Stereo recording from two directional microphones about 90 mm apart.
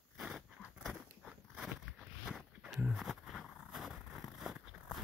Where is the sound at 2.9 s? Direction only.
Centre (ahead or behind).